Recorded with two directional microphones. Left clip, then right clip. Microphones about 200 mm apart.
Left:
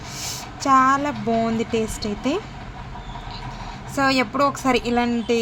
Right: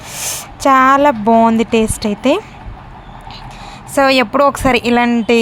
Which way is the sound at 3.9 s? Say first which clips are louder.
Right 9 dB; 45° right (ahead or behind).